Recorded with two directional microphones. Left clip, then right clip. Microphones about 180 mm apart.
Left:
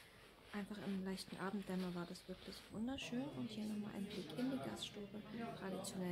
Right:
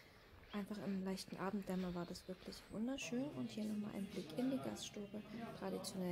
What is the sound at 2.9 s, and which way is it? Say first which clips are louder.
Speech: right 2 dB; 15° right (ahead or behind).